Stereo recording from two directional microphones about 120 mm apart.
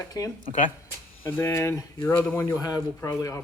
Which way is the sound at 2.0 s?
15° left (ahead or behind).